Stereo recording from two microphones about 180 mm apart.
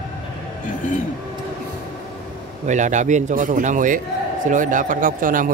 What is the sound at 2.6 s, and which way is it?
A man's voice, 40° right (ahead or behind).